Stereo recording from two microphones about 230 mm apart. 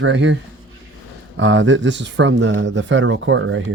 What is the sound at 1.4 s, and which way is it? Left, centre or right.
Speech, right.